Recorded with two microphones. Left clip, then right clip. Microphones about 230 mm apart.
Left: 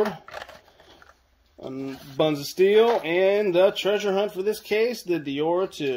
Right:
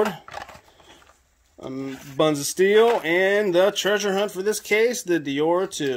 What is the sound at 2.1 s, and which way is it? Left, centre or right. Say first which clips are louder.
Speech: right 2 dB; right.